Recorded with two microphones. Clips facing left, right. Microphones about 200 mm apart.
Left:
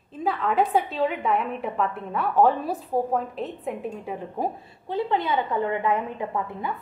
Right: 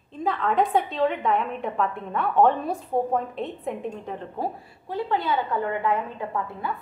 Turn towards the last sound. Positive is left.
turn(degrees=20)  # may be behind; listen again after turning